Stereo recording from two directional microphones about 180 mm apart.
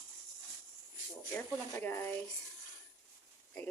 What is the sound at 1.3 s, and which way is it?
Speech, 10° left (ahead or behind).